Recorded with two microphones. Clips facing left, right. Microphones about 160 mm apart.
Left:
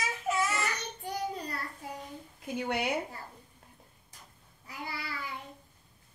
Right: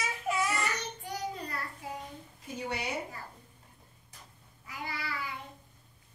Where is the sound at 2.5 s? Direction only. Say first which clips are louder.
Left 4 dB; 60° left (ahead or behind).